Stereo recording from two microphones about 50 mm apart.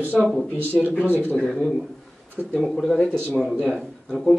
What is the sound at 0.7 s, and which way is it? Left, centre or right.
Speech, right.